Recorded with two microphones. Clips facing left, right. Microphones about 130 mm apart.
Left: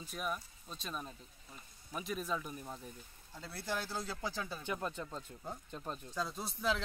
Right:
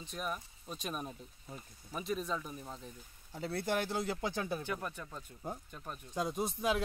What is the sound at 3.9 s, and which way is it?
Speech, 20° right (ahead or behind).